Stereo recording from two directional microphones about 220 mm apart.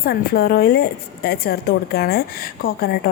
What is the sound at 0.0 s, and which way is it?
A woman's voice, 45° left (ahead or behind).